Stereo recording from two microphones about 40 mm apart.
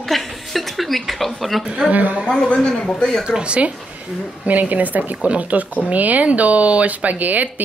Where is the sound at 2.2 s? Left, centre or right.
Centre.